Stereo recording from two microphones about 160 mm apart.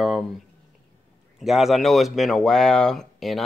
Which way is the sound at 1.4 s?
Centre (ahead or behind).